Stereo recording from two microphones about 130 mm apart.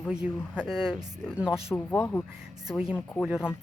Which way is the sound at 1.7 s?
15° left (ahead or behind).